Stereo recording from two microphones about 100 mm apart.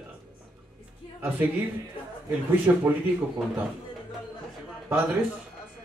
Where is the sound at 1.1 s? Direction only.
20° right (ahead or behind).